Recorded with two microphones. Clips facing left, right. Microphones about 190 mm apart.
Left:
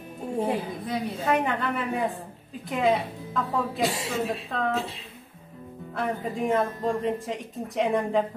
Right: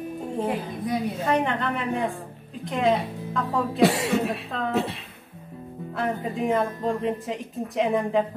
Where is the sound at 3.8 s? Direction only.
65° right (ahead or behind).